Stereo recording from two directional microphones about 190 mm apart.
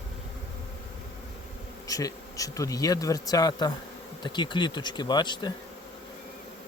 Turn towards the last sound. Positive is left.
turn(degrees=25)  # may be behind; listen again after turning